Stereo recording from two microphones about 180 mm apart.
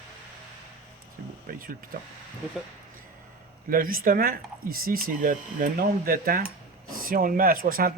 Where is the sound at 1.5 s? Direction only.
55° right (ahead or behind).